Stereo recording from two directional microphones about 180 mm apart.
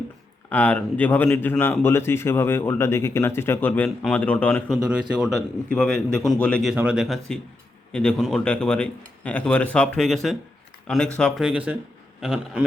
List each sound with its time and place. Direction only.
0.5 s a man's voice: 10° left (ahead or behind)